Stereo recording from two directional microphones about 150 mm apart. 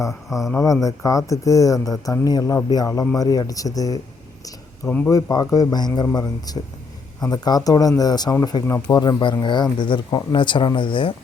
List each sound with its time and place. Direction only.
0.1 s speech: centre (ahead or behind)
0.6 s speech: 20° left (ahead or behind)
5.0 s speech: 25° left (ahead or behind)